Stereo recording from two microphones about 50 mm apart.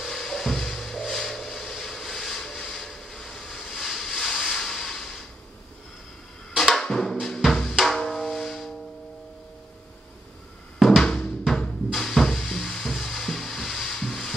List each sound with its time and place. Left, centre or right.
0.0 s a sound: centre
2.6 s vehicle: centre
6.5 s drum: centre
7.8 s music: centre
11.0 s music: centre